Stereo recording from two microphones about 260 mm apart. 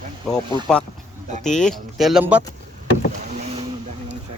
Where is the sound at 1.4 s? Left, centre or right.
Centre.